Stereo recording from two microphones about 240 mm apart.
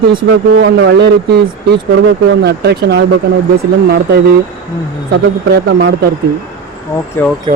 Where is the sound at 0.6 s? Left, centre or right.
Right.